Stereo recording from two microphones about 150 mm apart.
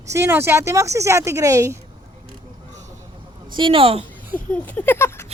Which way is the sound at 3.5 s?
35° right (ahead or behind).